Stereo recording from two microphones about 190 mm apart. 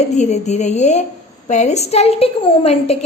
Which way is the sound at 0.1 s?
35° left (ahead or behind).